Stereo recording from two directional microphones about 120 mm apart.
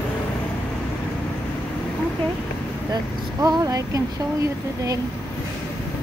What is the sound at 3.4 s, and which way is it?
Speech, 30° right (ahead or behind).